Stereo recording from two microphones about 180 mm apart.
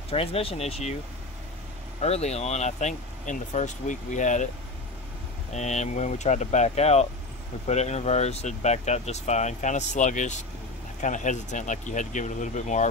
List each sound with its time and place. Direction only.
0.1 s speech: 30° left (ahead or behind)
2.0 s speech: 35° left (ahead or behind)
5.5 s speech: 40° left (ahead or behind)